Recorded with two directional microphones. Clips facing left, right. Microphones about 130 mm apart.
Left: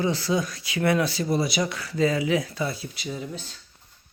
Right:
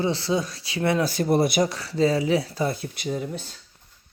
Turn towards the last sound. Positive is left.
turn(degrees=-50)  # may be behind; listen again after turning